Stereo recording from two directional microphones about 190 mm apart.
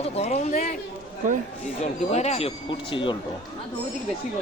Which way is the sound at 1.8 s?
35° left (ahead or behind).